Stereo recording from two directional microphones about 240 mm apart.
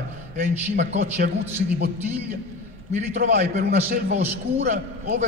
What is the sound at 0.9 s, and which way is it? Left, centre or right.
Speech, right.